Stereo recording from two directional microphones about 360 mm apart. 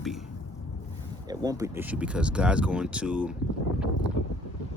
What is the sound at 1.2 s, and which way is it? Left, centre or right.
Speech, centre.